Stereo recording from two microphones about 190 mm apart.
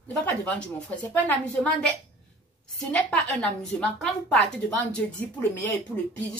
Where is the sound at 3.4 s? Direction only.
5° left (ahead or behind).